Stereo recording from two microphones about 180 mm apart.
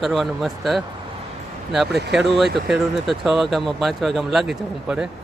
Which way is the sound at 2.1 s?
Centre (ahead or behind).